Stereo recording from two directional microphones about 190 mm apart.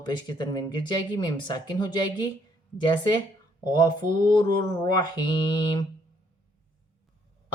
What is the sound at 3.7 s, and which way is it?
Speech, 25° left (ahead or behind).